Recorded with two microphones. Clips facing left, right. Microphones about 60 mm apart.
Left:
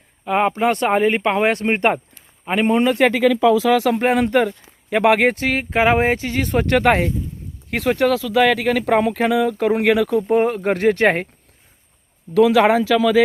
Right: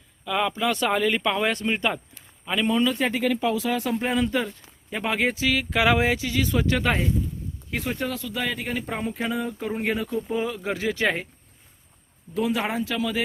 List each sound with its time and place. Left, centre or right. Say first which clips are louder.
0.3 s a man's voice: left 7 dB; left
12.3 s speech: left 12 dB; left